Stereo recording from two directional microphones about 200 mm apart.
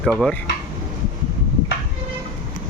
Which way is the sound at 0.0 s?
Centre (ahead or behind).